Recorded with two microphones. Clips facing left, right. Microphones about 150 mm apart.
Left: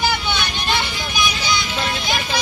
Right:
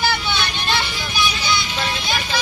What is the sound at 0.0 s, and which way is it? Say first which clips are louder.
Vehicle: even; 15° left (ahead or behind).